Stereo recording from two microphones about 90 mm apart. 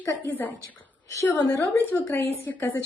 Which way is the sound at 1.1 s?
35° left (ahead or behind).